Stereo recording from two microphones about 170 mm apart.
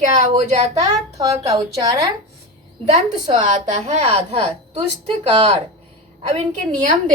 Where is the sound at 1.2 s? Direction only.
20° right (ahead or behind).